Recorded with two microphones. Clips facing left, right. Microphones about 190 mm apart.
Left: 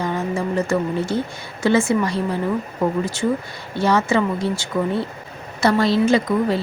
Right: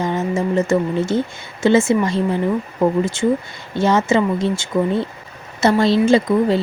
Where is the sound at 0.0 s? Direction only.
20° right (ahead or behind).